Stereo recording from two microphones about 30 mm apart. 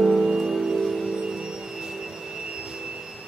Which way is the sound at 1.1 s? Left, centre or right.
Right.